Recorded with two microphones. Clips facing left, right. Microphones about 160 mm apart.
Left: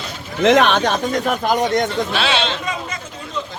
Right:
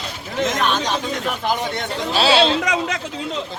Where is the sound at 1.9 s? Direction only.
35° right (ahead or behind).